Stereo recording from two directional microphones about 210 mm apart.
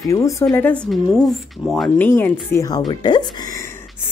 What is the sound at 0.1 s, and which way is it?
Speech, 15° left (ahead or behind).